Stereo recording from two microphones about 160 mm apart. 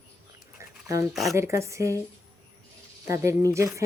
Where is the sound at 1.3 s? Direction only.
15° right (ahead or behind).